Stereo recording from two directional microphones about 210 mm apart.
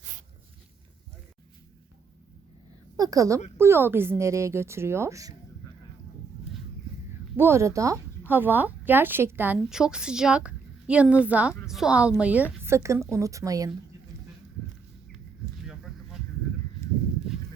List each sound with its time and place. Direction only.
3.0 s a woman's voice: 15° right (ahead or behind)
7.3 s a woman's voice: 10° right (ahead or behind)
15.6 s a sound: centre (ahead or behind)